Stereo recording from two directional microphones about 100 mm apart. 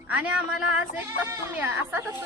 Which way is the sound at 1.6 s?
20° right (ahead or behind).